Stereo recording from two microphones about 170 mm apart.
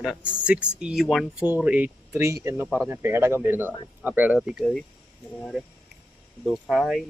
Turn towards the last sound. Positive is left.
turn(degrees=0)  # may be behind; listen again after turning